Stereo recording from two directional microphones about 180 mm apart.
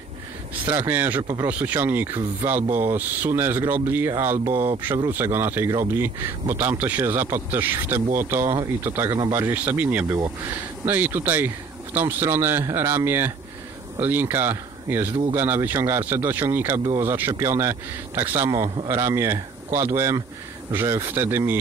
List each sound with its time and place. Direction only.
0.7 s speech: 10° right (ahead or behind)